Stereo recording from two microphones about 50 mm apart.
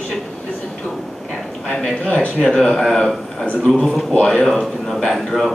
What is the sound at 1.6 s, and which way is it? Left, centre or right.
A man's voice, centre.